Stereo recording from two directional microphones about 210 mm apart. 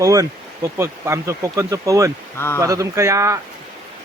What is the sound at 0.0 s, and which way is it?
Speech, 15° right (ahead or behind).